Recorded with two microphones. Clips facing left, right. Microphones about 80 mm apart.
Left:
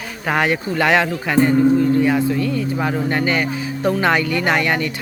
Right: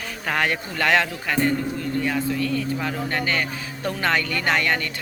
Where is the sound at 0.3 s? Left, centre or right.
Centre.